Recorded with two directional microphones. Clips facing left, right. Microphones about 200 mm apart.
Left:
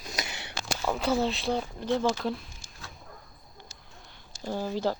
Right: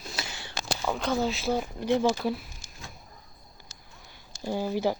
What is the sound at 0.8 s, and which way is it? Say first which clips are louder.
Speech: left 1 dB; 5° left (ahead or behind).